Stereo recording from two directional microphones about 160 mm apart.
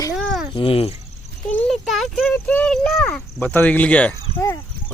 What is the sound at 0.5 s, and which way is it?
Speech, 35° left (ahead or behind).